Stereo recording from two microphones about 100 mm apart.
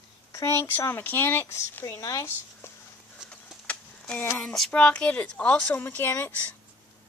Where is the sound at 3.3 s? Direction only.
10° left (ahead or behind).